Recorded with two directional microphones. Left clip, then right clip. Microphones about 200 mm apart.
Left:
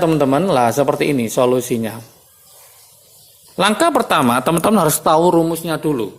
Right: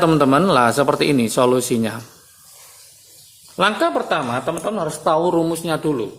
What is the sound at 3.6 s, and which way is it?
Speech, 25° left (ahead or behind).